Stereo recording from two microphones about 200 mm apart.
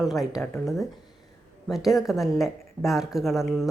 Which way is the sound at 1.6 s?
Centre (ahead or behind).